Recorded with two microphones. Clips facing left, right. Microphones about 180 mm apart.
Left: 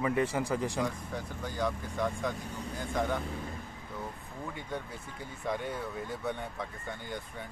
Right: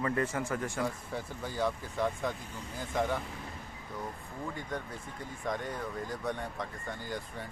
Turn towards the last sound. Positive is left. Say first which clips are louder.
# right 1 dB
turn(degrees=0)  # may be behind; listen again after turning